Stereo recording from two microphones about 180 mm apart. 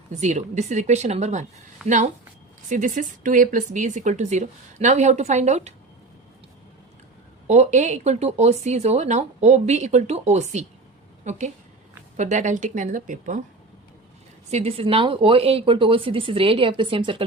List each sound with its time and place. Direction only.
0.1 s speech: 40° right (ahead or behind)
1.8 s speech: centre (ahead or behind)
2.6 s speech: 45° right (ahead or behind)
7.4 s a woman's voice: 40° right (ahead or behind)
14.5 s speech: 35° right (ahead or behind)